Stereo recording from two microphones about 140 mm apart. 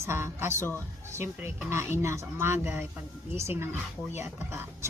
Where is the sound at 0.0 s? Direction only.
20° right (ahead or behind).